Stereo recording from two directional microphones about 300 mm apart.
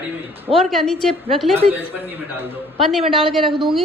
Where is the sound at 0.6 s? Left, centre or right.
Centre.